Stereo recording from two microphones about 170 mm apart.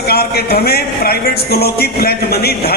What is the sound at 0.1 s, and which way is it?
Speech, 65° left (ahead or behind).